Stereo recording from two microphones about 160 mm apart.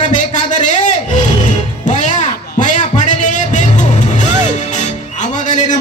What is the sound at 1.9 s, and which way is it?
Music, 50° left (ahead or behind).